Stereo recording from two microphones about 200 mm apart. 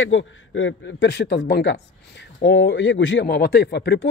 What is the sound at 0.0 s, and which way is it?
Speech, 75° left (ahead or behind).